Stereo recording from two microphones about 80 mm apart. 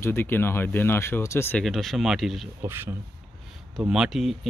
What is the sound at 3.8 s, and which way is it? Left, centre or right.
Speech, centre.